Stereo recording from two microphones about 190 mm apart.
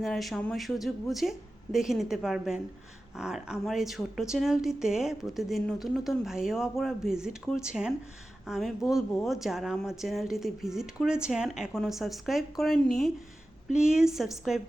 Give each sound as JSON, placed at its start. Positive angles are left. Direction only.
{"t": 0.0, "sound": "speech", "side_deg": 0}